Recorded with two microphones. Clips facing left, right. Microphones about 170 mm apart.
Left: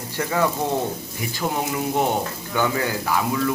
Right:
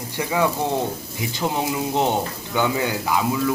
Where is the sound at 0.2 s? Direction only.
10° right (ahead or behind).